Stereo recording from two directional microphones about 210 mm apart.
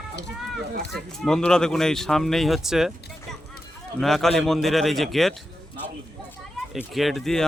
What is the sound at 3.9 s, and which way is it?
Speech, centre (ahead or behind).